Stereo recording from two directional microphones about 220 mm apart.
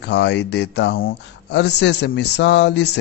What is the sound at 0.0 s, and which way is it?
Speech, 50° left (ahead or behind).